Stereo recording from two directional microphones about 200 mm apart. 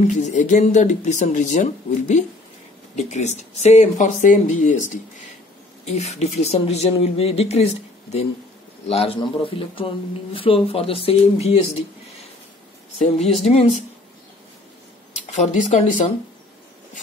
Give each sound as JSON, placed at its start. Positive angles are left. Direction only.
{"t": 0.0, "sound": "speech", "side_deg": 35}
{"t": 5.9, "sound": "speech", "side_deg": 35}
{"t": 8.8, "sound": "speech", "side_deg": 30}
{"t": 13.0, "sound": "speech", "side_deg": 30}
{"t": 15.1, "sound": "speech", "side_deg": 35}